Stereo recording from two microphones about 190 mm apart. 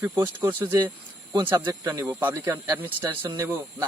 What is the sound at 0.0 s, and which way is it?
Speech, 10° right (ahead or behind).